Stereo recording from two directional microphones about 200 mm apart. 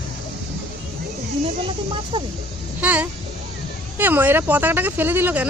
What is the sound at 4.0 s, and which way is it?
Speech, 10° right (ahead or behind).